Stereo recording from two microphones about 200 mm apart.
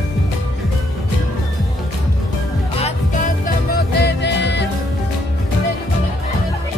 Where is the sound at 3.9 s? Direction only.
55° left (ahead or behind).